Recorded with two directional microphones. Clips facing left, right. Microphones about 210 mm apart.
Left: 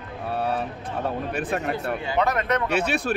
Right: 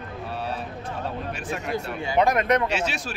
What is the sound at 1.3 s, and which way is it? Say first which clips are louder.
Speech: left 5 dB; 60° left (ahead or behind).